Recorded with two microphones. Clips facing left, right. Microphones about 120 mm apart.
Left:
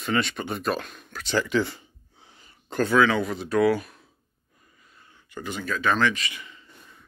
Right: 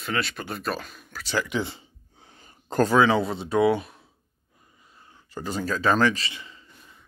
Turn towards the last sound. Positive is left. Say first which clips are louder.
# right 1 dB
turn(degrees=-30)  # may be behind; listen again after turning